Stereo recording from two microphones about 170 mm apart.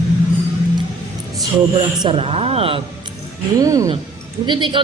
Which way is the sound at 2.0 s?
35° right (ahead or behind).